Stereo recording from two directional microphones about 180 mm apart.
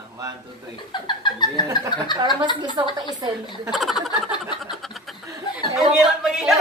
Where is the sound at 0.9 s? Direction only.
25° left (ahead or behind).